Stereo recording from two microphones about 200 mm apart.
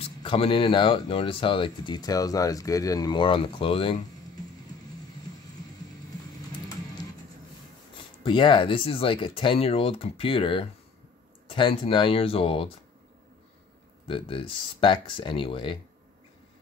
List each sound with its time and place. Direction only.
0.0 s speech: 25° left (ahead or behind)
8.2 s speech: 25° left (ahead or behind)
14.0 s speech: 25° left (ahead or behind)